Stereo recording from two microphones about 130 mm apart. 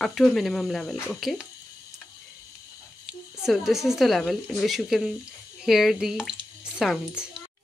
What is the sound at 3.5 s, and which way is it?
Speech, centre (ahead or behind).